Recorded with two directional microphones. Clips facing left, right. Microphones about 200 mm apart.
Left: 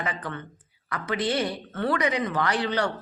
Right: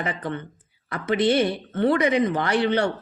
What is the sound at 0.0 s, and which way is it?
A woman's voice, 25° right (ahead or behind).